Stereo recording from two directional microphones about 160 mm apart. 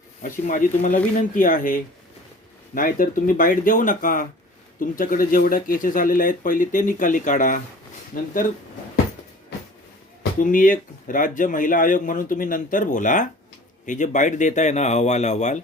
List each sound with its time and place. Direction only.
0.2 s speech: 55° left (ahead or behind)
10.4 s speech: 60° left (ahead or behind)